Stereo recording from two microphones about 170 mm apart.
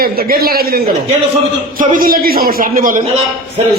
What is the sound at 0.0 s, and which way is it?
Speech, 60° right (ahead or behind).